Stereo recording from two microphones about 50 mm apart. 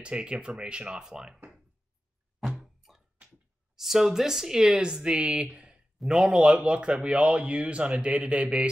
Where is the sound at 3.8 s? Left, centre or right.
Centre.